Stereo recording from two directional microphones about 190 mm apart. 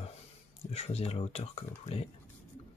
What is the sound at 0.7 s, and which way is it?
Speech, 35° left (ahead or behind).